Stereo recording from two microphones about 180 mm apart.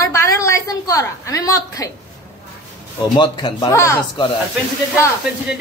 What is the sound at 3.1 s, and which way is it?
Speech, 25° left (ahead or behind).